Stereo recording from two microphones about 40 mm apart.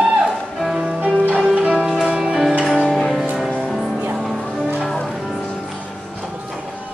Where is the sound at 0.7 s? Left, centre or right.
Centre.